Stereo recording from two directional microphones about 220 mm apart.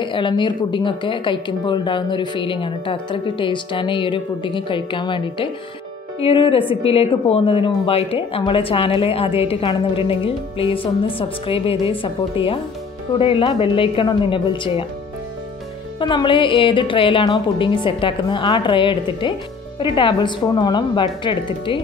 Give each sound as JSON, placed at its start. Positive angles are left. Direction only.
{"t": 0.0, "sound": "speech", "side_deg": 20}
{"t": 16.0, "sound": "speech", "side_deg": 20}